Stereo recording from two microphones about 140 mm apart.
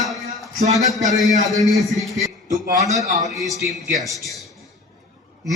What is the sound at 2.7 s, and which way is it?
Speech, 25° right (ahead or behind).